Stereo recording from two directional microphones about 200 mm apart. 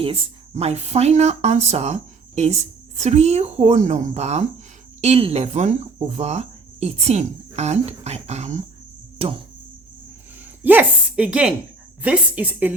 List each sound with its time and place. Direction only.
0.0 s speech: 30° right (ahead or behind)
10.6 s a woman's voice: 10° right (ahead or behind)